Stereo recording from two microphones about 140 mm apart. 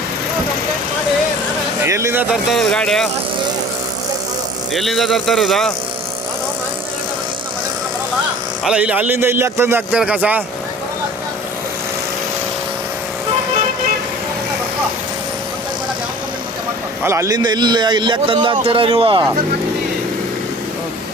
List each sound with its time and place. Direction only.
1.8 s speech: 20° right (ahead or behind)
2.3 s a man's voice: centre (ahead or behind)
4.7 s a man's voice: centre (ahead or behind)
8.6 s a man's voice: 10° right (ahead or behind)
17.0 s a man's voice: 20° right (ahead or behind); by 19.3 s 35° right (ahead or behind)